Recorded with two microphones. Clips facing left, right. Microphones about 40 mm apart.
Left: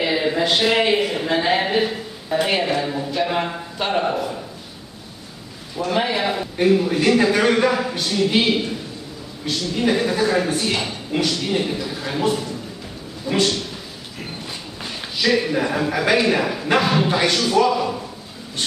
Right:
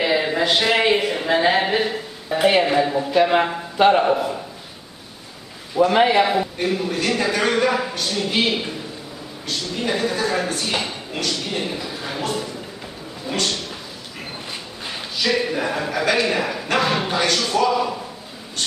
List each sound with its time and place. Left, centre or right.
0.0 s speech: centre
2.4 s a man's voice: centre
4.0 s speech: centre
5.8 s a man's voice: right
6.0 s speech: centre
6.6 s speech: centre
15.1 s a man's voice: centre